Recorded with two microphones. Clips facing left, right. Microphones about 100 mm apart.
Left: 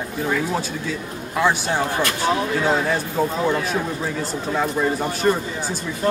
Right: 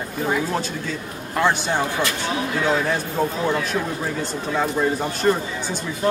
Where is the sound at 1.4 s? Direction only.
Centre (ahead or behind).